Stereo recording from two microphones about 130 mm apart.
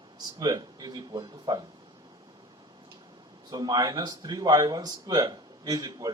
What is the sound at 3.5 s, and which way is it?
Speech, 30° right (ahead or behind).